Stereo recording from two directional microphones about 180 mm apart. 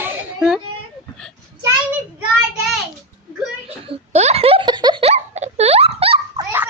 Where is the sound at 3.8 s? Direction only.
35° right (ahead or behind).